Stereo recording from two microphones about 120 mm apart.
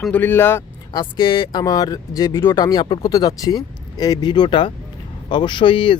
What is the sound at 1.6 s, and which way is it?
Speech, 30° left (ahead or behind).